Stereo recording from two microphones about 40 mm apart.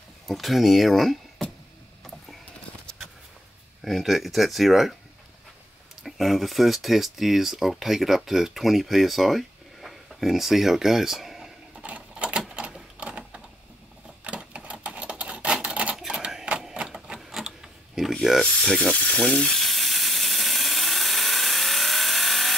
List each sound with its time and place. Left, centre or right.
0.3 s speech: centre
3.8 s speech: centre
6.0 s speech: centre
11.8 s typewriter: right
13.0 s a sound: right
14.2 s sewing machine: right
14.9 s a sound: right
16.7 s typewriter: right
17.1 s a sound: centre
18.4 s mechanisms: left
18.7 s sizzle: centre
18.9 s speech: left
19.2 s a sound: centre